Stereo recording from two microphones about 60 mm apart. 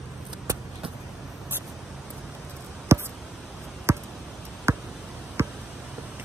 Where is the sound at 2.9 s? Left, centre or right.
Right.